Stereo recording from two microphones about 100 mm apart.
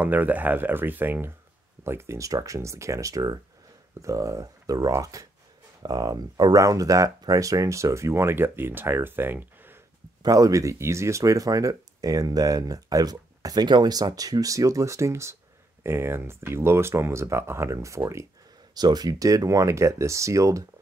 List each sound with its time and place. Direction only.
0.0 s speech: 15° right (ahead or behind)
10.2 s speech: 35° right (ahead or behind)
18.8 s speech: 40° right (ahead or behind)